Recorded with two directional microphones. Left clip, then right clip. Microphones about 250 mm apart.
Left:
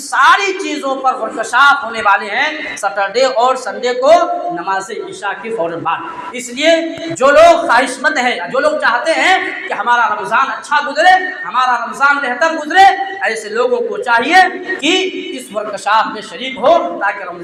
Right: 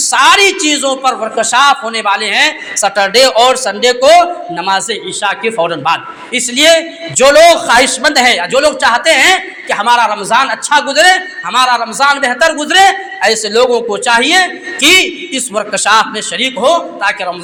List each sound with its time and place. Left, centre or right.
0.1 s a man's voice: right